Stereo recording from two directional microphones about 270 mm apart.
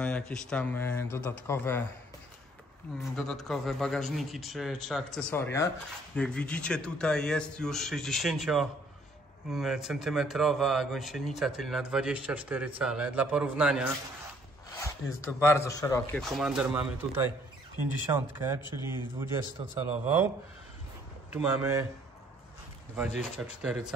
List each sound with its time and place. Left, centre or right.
0.0 s speech: centre
3.0 s speech: centre
15.4 s a man's voice: centre
18.6 s speech: centre
19.1 s a man's voice: centre
21.3 s a man's voice: centre
22.9 s speech: centre